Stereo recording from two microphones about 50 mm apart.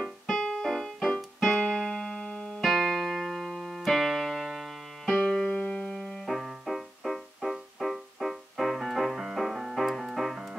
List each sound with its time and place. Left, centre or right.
0.0 s music: centre
2.6 s keyboard: centre
5.2 s music: centre
5.9 s music: centre